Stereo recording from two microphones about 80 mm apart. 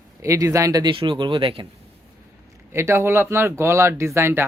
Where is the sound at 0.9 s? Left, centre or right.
Right.